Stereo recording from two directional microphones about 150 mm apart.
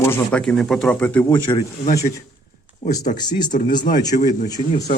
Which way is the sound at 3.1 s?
30° left (ahead or behind).